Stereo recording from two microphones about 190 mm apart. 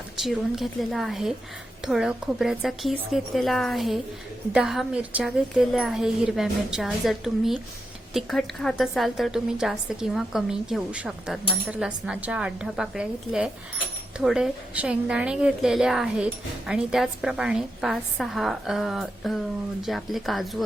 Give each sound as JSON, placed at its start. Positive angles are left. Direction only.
{"t": 0.2, "sound": "a woman's voice", "side_deg": 0}